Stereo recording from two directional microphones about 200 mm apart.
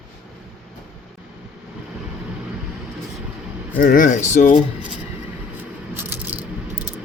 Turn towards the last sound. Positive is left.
turn(degrees=-10)  # may be behind; listen again after turning